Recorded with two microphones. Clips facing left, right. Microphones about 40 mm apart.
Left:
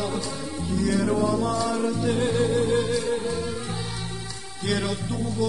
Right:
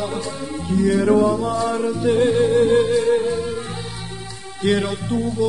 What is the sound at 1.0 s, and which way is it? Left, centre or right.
Music, right.